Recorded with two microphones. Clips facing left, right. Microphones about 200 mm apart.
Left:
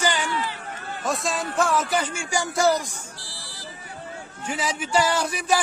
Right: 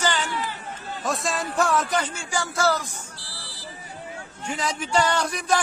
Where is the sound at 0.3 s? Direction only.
50° right (ahead or behind).